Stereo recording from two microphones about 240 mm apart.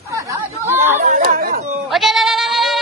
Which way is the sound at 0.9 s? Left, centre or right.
Right.